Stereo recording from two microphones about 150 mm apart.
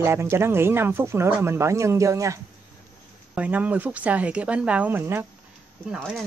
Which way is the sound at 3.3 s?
10° right (ahead or behind).